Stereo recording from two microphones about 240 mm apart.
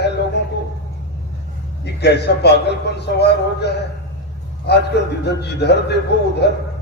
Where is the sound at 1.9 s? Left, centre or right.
Left.